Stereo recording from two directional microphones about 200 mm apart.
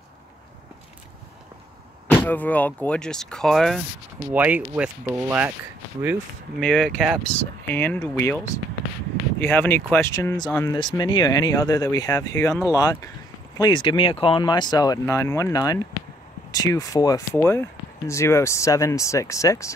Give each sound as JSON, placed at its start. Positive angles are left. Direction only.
{"t": 2.0, "sound": "speech", "side_deg": 10}
{"t": 6.6, "sound": "speech", "side_deg": 5}
{"t": 9.4, "sound": "speech", "side_deg": 10}
{"t": 10.8, "sound": "speech", "side_deg": 25}